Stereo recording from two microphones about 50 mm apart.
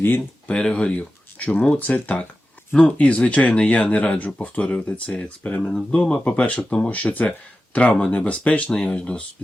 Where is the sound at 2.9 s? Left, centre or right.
Left.